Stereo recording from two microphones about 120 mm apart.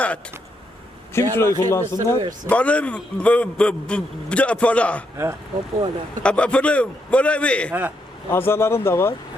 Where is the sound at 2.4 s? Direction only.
10° left (ahead or behind).